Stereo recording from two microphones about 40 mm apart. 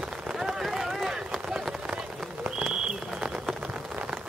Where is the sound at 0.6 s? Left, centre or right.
Centre.